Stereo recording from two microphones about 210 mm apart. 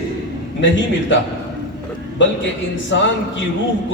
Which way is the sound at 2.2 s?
60° left (ahead or behind).